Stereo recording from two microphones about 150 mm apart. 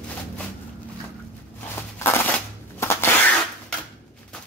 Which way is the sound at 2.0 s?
15° left (ahead or behind).